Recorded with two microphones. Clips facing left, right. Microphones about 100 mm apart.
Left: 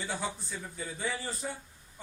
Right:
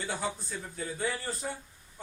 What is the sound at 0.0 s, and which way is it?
Speech, centre (ahead or behind).